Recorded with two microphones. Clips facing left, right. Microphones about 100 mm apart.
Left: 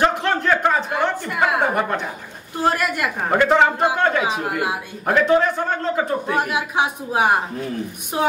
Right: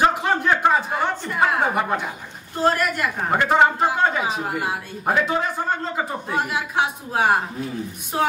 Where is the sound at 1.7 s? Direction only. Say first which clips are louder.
Left 1 dB; 10° right (ahead or behind).